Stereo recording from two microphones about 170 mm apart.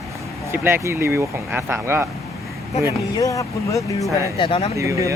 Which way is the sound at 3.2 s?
20° left (ahead or behind).